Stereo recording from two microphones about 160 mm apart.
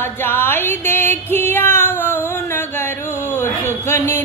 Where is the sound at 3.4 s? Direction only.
15° left (ahead or behind).